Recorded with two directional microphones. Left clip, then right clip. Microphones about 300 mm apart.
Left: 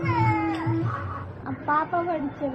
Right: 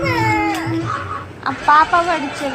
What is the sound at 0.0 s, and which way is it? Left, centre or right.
Music, centre.